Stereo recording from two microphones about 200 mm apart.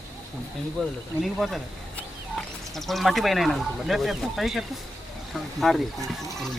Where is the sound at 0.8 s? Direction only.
5° left (ahead or behind).